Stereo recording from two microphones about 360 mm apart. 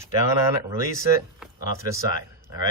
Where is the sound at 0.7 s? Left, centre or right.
Centre.